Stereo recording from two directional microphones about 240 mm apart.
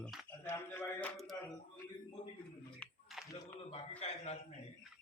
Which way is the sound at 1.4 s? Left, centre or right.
Centre.